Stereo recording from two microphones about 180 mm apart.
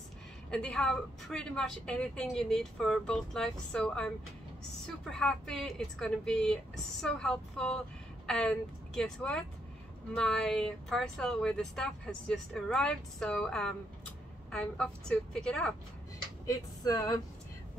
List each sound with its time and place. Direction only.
0.5 s speech: 5° left (ahead or behind)
5.1 s speech: 5° left (ahead or behind)
16.4 s a sound: 20° left (ahead or behind)